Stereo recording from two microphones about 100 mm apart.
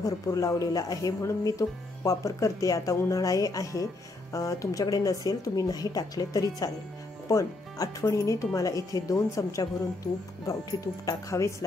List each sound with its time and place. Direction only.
0.0 s speech: 35° left (ahead or behind)